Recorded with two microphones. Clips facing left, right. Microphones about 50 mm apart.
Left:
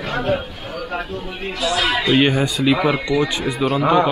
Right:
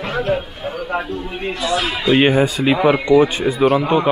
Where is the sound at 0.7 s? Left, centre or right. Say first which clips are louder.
Right 4 dB; centre.